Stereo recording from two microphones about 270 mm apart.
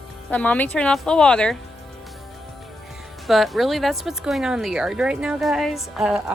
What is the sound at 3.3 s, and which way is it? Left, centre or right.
Speech, centre.